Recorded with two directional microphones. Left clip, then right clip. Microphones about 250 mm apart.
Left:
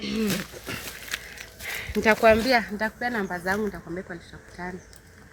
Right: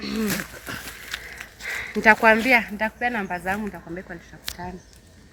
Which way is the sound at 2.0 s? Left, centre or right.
Centre.